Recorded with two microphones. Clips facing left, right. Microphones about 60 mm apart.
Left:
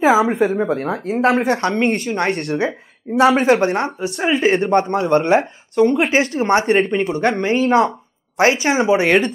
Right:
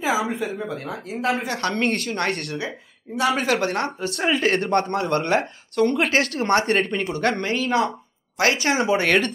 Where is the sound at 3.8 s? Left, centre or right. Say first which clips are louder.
Left 4 dB; centre.